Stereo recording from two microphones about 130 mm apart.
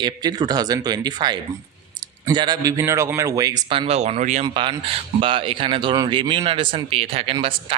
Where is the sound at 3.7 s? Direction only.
50° right (ahead or behind).